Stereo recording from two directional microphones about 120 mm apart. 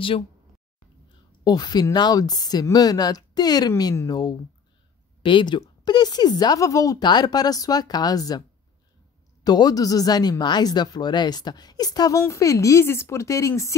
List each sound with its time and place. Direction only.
1.4 s speech: 35° left (ahead or behind)